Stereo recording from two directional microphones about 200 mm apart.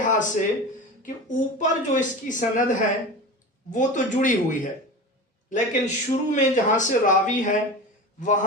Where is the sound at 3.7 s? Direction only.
40° left (ahead or behind).